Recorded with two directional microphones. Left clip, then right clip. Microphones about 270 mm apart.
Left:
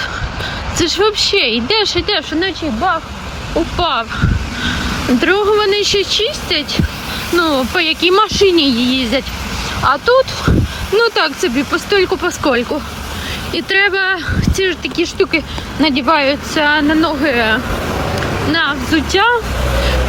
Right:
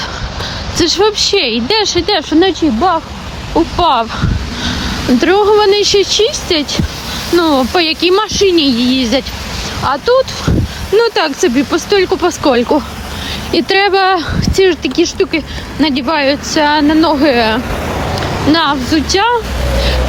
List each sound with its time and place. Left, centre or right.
0.8 s speech: centre
17.8 s a sound: left
18.5 s speech: centre